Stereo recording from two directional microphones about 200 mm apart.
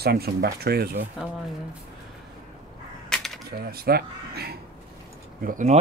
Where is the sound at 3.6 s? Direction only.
50° right (ahead or behind).